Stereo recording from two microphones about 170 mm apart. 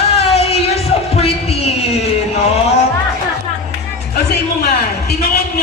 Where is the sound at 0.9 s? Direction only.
40° left (ahead or behind).